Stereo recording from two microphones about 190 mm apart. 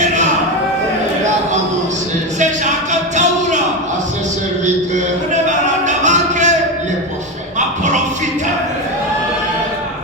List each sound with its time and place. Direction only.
2.9 s music: 40° right (ahead or behind)
5.8 s music: 40° right (ahead or behind)